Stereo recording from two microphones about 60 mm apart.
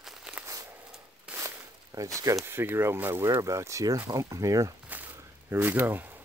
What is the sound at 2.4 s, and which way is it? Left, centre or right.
Speech, right.